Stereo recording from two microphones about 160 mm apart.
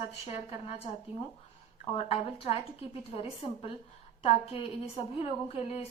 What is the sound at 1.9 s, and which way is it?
Speech, 35° left (ahead or behind).